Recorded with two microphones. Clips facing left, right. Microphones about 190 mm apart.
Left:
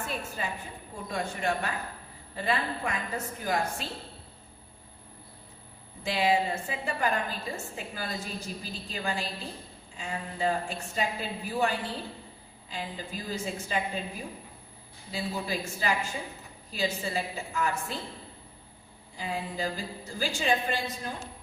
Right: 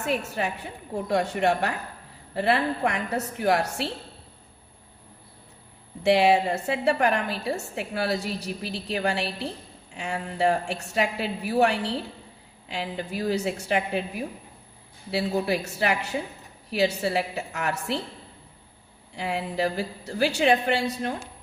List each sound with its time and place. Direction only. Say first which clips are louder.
0.1 s a woman's voice: right 7 dB; 75° right (ahead or behind)
6.0 s a woman's voice: right 7 dB; 75° right (ahead or behind)
19.1 s a woman's voice: right 6 dB; 70° right (ahead or behind)